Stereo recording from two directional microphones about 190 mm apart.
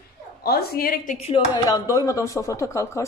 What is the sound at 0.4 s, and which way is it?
Speech, 55° left (ahead or behind).